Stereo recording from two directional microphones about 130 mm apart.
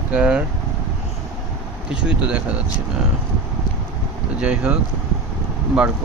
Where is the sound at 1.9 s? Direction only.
10° right (ahead or behind).